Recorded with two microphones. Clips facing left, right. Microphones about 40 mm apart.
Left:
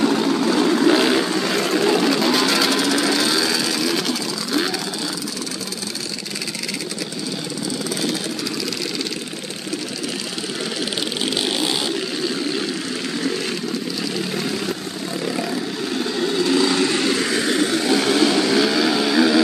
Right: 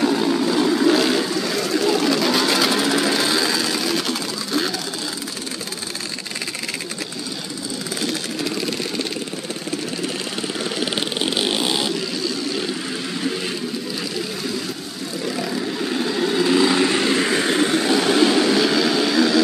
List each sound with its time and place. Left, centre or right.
0.2 s vehicle: centre
2.0 s bird: centre
2.4 s a sound: centre
11.1 s vehicle: centre
15.2 s vehicle: centre; by 17.7 s right
17.8 s vehicle: centre